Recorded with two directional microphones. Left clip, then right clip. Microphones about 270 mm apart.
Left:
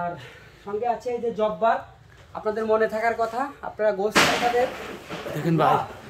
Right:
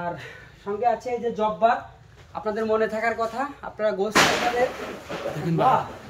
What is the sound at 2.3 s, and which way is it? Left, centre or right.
Speech, centre.